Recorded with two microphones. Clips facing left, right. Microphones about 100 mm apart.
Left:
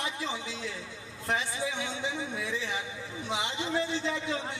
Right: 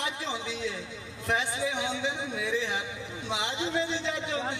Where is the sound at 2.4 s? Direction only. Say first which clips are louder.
Right 4 dB; 70° right (ahead or behind).